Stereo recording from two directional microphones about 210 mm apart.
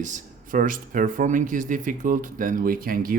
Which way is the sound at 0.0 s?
40° right (ahead or behind).